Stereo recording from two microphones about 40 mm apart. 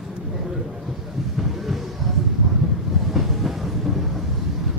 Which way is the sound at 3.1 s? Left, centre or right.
Centre.